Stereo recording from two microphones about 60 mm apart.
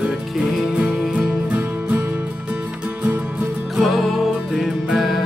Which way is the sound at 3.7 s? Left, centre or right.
Centre.